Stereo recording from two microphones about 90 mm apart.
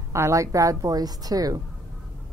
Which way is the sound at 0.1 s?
35° right (ahead or behind).